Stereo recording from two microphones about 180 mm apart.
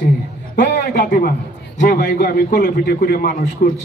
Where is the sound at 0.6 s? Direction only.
50° left (ahead or behind).